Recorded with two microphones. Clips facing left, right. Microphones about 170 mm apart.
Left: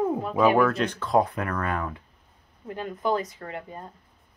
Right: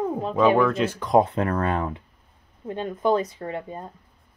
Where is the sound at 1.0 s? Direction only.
20° right (ahead or behind).